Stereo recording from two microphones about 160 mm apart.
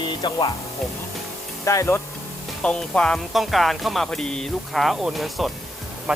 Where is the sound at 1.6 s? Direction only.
20° left (ahead or behind).